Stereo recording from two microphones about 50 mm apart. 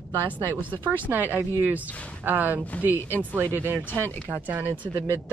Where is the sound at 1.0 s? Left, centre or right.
Right.